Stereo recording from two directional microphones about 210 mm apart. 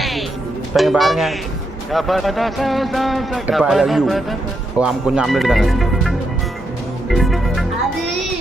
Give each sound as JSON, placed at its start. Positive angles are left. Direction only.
{"t": 0.0, "sound": "music", "side_deg": 0}
{"t": 0.7, "sound": "a man's voice", "side_deg": 0}
{"t": 7.1, "sound": "music", "side_deg": 0}